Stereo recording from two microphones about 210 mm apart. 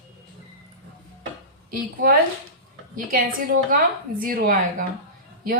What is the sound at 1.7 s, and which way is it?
A woman's voice, 45° right (ahead or behind).